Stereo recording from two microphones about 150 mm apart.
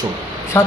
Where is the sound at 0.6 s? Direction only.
25° left (ahead or behind).